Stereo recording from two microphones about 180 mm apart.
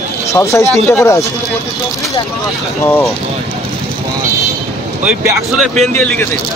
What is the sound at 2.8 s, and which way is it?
Speech, 15° left (ahead or behind).